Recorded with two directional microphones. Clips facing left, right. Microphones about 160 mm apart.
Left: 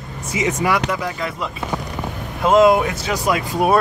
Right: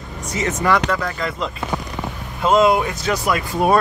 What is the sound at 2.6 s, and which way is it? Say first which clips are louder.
Speech: left 2 dB; 15° left (ahead or behind).